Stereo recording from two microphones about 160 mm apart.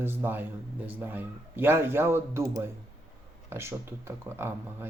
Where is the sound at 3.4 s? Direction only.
15° right (ahead or behind).